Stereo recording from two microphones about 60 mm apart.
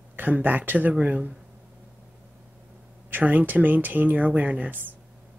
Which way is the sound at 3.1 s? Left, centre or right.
Right.